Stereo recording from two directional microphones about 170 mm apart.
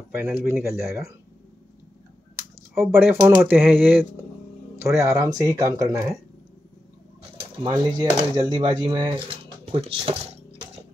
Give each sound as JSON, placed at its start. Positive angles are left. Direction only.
{"t": 0.2, "sound": "speech", "side_deg": -15}
{"t": 2.7, "sound": "speech", "side_deg": -15}
{"t": 7.6, "sound": "speech", "side_deg": -25}